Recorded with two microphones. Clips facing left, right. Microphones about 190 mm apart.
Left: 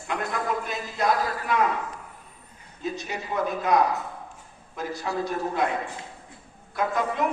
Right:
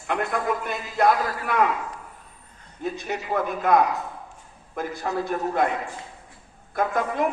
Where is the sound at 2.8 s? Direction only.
55° right (ahead or behind).